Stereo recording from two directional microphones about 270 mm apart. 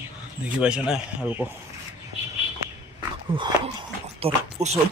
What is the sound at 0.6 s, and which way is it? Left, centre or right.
Speech, centre.